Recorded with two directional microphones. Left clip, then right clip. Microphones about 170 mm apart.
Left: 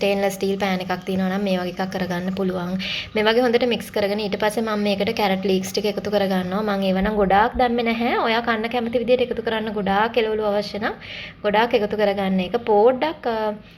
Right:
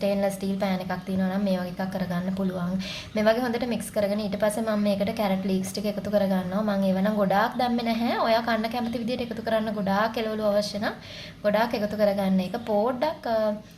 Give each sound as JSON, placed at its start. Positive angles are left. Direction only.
{"t": 0.0, "sound": "a woman's voice", "side_deg": 15}